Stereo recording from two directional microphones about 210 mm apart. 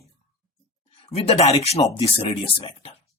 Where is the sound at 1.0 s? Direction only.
30° left (ahead or behind).